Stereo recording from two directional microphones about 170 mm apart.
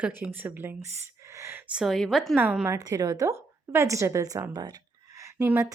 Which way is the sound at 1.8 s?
Centre (ahead or behind).